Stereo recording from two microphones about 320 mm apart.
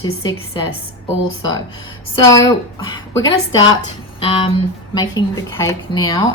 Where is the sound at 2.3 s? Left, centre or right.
Centre.